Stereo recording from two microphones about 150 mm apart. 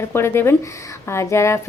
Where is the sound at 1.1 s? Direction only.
20° left (ahead or behind).